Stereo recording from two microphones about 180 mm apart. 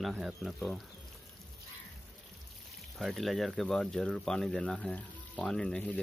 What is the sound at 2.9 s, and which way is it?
Speech, centre (ahead or behind).